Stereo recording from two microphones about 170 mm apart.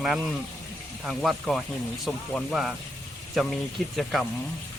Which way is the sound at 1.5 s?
Centre (ahead or behind).